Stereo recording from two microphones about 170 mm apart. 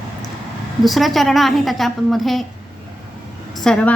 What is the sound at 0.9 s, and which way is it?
A woman's voice, centre (ahead or behind).